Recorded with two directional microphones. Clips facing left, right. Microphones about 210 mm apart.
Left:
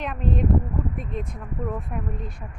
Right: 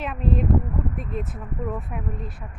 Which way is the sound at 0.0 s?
Centre (ahead or behind).